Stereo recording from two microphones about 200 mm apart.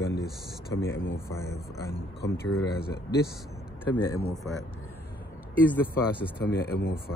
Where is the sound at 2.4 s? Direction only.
50° left (ahead or behind).